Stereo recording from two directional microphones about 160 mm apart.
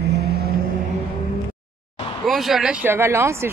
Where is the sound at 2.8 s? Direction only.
15° right (ahead or behind).